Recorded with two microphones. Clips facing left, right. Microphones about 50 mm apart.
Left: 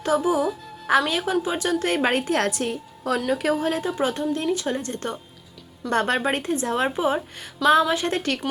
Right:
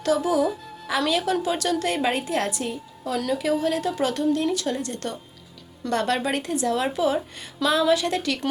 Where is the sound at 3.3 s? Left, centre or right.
Left.